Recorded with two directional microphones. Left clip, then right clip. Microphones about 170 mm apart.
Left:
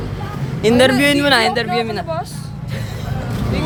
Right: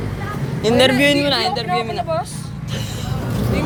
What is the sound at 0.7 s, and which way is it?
Speech, 35° left (ahead or behind).